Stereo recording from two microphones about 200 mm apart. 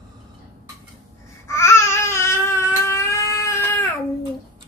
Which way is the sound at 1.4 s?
15° left (ahead or behind).